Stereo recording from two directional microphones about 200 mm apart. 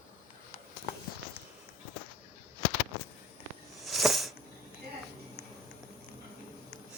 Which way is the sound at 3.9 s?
Centre (ahead or behind).